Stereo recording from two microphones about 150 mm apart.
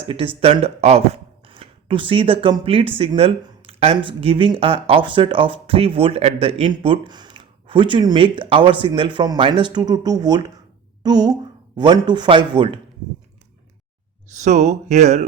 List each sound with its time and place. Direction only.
0.1 s a woman's voice: 40° right (ahead or behind)
14.4 s speech: 50° right (ahead or behind)